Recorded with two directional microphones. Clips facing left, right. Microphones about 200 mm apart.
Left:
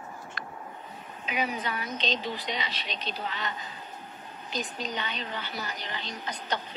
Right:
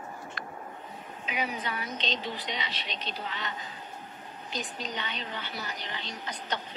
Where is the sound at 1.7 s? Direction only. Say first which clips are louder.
Left 2 dB; 45° left (ahead or behind).